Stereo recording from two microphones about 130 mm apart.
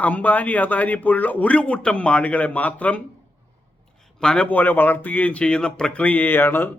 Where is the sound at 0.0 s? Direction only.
10° left (ahead or behind).